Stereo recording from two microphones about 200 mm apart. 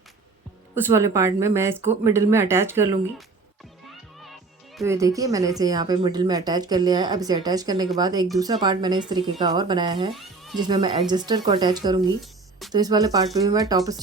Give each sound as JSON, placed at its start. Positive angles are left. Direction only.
{"t": 0.9, "sound": "speech", "side_deg": -15}
{"t": 4.8, "sound": "speech", "side_deg": -15}
{"t": 10.2, "sound": "music", "side_deg": 0}
{"t": 10.6, "sound": "speech", "side_deg": -20}
{"t": 12.2, "sound": "music", "side_deg": 0}
{"t": 12.7, "sound": "speech", "side_deg": -20}